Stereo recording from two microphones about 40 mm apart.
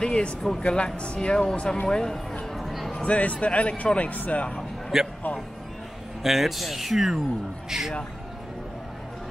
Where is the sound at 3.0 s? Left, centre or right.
Left.